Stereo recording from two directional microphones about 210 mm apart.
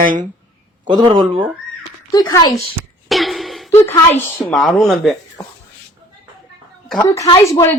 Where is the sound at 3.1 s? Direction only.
Centre (ahead or behind).